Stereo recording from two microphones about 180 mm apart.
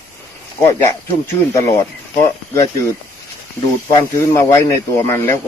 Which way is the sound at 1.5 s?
15° left (ahead or behind).